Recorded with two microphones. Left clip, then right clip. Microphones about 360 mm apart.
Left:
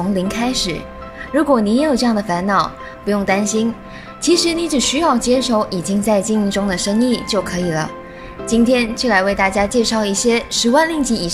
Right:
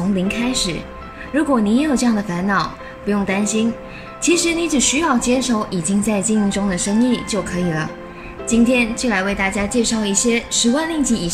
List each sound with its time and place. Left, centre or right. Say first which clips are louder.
0.1 s a woman's voice: even; centre